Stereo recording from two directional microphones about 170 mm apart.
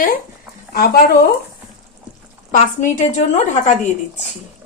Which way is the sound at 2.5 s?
50° left (ahead or behind).